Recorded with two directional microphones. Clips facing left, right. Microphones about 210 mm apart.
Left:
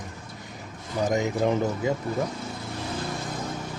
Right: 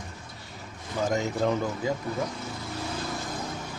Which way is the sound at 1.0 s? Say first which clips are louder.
Left 2 dB; 15° left (ahead or behind).